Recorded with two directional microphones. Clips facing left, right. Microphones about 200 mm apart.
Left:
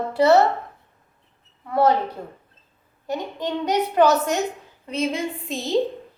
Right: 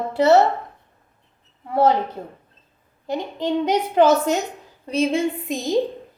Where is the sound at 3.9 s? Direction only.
25° right (ahead or behind).